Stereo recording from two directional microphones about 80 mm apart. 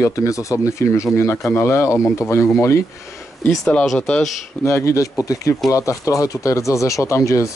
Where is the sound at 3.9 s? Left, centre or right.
Centre.